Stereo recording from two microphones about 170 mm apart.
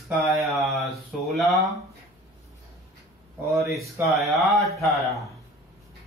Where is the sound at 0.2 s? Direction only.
Centre (ahead or behind).